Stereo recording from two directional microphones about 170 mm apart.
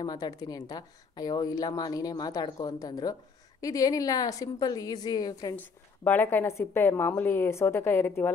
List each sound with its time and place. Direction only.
0.0 s a woman's voice: 20° left (ahead or behind)